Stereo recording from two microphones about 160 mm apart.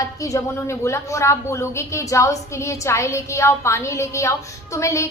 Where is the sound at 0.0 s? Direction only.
20° left (ahead or behind).